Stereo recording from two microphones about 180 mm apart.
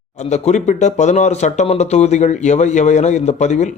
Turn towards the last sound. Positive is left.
turn(degrees=40)  # may be behind; listen again after turning